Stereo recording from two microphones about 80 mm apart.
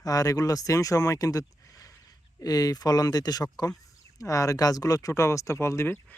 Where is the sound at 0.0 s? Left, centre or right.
Left.